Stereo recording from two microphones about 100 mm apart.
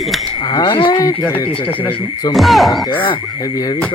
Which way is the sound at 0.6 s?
50° left (ahead or behind).